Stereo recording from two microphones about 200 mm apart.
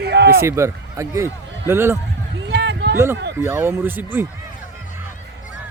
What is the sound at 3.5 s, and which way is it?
Speech, 10° right (ahead or behind).